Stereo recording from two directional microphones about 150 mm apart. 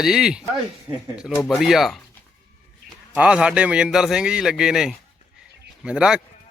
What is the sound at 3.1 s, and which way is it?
Speech, 5° right (ahead or behind).